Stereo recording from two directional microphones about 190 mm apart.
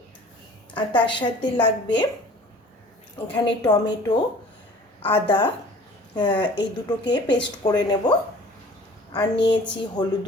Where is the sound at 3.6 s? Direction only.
20° left (ahead or behind).